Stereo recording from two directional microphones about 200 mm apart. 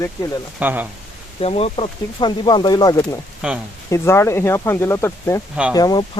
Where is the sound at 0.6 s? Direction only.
10° right (ahead or behind).